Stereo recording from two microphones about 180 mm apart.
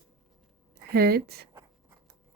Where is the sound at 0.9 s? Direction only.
60° right (ahead or behind).